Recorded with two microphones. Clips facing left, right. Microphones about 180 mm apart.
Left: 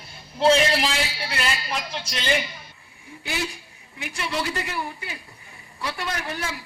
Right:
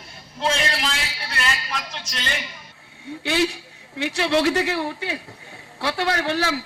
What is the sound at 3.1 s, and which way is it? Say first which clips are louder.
A man's voice: right 8 dB; 80° right.